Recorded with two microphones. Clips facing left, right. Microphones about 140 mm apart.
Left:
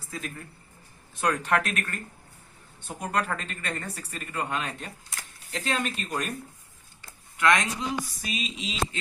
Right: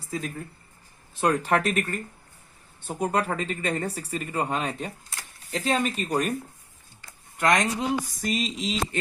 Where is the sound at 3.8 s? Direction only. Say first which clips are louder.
Right 7 dB; 35° right (ahead or behind).